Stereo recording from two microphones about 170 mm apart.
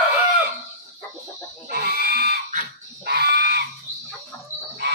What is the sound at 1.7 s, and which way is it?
Pig, 65° right (ahead or behind).